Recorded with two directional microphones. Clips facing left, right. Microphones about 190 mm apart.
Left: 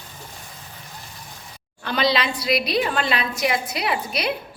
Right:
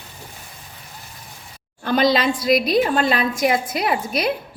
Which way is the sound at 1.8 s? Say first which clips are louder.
Right 5 dB; 45° right (ahead or behind).